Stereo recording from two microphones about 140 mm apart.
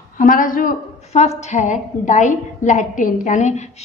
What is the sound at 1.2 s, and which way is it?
A woman's voice, 55° left (ahead or behind).